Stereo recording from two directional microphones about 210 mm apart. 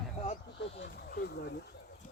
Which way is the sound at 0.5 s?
60° left (ahead or behind).